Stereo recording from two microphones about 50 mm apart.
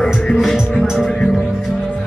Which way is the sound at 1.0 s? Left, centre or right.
Centre.